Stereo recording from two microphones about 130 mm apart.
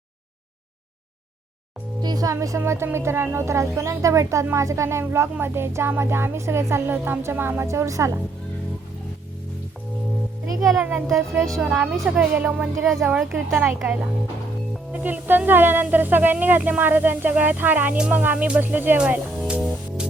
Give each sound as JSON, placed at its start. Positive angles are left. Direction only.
{"t": 2.0, "sound": "speech", "side_deg": -30}
{"t": 10.6, "sound": "speech", "side_deg": 0}
{"t": 13.5, "sound": "speech", "side_deg": -15}
{"t": 15.0, "sound": "speech", "side_deg": -15}
{"t": 19.5, "sound": "music", "side_deg": -5}